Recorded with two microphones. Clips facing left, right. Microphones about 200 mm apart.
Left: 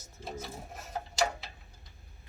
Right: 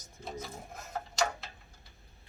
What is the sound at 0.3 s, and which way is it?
Printer, 5° left (ahead or behind).